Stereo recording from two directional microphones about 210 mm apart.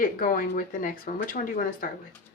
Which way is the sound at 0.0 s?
40° left (ahead or behind).